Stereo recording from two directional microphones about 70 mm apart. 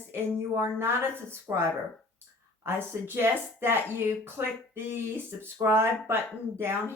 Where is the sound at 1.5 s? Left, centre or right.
Right.